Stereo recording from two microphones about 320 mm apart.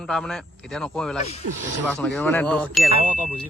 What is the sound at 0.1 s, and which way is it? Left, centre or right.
A man's voice, centre.